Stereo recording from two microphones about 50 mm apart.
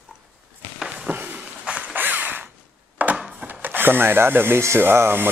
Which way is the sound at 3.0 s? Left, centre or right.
Right.